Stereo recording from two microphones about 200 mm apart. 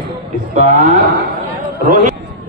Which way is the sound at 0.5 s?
35° right (ahead or behind).